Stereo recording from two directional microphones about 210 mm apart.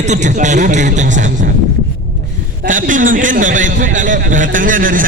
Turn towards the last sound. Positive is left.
turn(degrees=-40)  # may be behind; listen again after turning